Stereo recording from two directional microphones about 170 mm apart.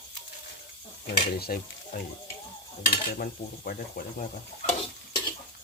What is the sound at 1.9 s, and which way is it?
Cutlery, 65° left (ahead or behind).